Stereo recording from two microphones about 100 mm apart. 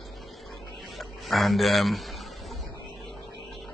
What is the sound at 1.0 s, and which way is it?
A man's voice, centre (ahead or behind).